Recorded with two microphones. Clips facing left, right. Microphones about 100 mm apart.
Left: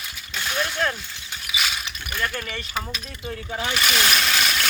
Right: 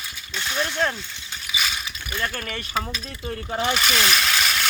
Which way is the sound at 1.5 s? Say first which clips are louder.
Even; centre (ahead or behind).